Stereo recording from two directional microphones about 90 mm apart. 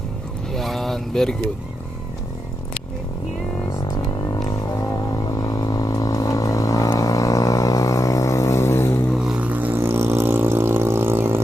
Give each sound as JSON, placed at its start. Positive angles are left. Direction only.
{"t": 0.5, "sound": "vehicle", "side_deg": 0}
{"t": 3.8, "sound": "music", "side_deg": 50}
{"t": 9.2, "sound": "vehicle", "side_deg": -15}